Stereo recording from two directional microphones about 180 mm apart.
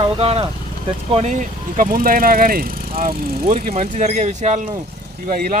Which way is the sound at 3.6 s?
40° right (ahead or behind).